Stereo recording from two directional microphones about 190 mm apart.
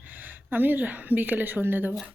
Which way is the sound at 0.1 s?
10° right (ahead or behind).